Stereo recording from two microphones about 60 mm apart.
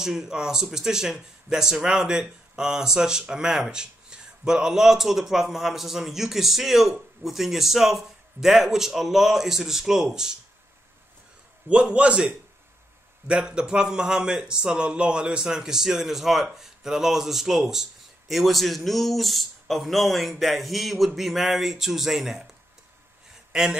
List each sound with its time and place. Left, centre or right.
0.0 s speech: centre
11.7 s a man's voice: centre
23.5 s speech: centre